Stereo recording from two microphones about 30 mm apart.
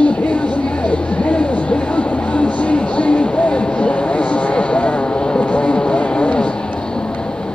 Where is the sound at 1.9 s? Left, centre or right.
Left.